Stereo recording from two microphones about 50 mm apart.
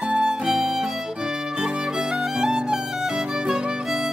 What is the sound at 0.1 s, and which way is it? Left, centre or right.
Music, centre.